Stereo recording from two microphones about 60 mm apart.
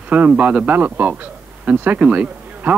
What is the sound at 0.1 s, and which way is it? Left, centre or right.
Speech, right.